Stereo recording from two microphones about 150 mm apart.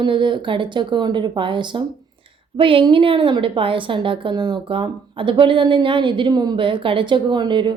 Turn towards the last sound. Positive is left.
turn(degrees=-30)  # may be behind; listen again after turning